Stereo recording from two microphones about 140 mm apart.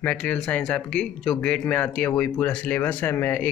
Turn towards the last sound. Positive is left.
turn(degrees=10)  # may be behind; listen again after turning